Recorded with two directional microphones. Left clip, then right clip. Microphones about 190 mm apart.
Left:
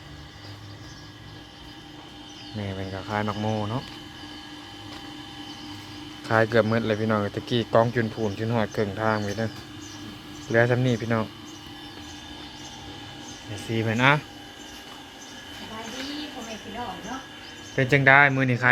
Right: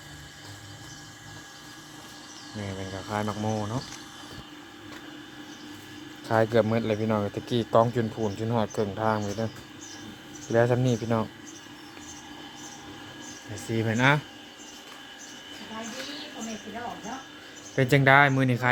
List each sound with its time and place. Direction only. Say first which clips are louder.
2.6 s speech: left 2 dB; centre (ahead or behind)
6.2 s speech: left 2 dB; 5° right (ahead or behind)
10.5 s speech: left 2 dB; 10° right (ahead or behind)
13.7 s speech: left 2 dB; 15° right (ahead or behind)
17.7 s speech: left 2 dB; 20° right (ahead or behind)